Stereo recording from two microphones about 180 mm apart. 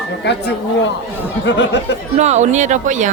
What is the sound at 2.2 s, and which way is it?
Speech, 40° right (ahead or behind).